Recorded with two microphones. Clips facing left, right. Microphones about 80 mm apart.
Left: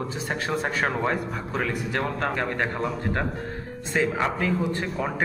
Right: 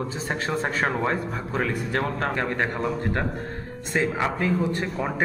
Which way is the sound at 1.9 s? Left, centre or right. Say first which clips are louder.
Right 1 dB; right.